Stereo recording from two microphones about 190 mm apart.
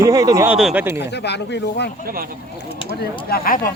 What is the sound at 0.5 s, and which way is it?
Speech, 5° right (ahead or behind).